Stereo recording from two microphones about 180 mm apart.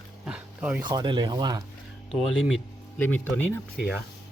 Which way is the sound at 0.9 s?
25° right (ahead or behind).